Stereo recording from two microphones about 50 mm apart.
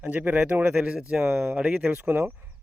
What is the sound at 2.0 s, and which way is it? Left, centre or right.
Speech, right.